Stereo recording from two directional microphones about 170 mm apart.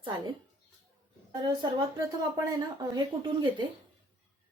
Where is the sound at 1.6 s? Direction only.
25° right (ahead or behind).